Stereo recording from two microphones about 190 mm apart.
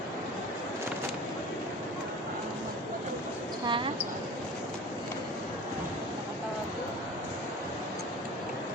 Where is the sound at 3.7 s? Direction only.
25° right (ahead or behind).